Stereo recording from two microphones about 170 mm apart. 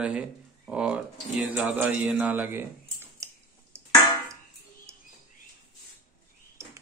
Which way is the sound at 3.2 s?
15° right (ahead or behind).